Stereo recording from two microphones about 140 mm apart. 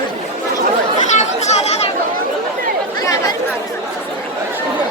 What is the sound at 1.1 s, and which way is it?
Chatter, 55° left (ahead or behind).